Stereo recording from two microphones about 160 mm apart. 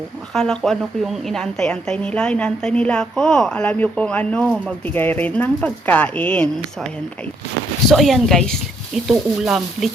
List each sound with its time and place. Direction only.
0.3 s a woman's voice: 5° left (ahead or behind)
7.9 s a woman's voice: centre (ahead or behind)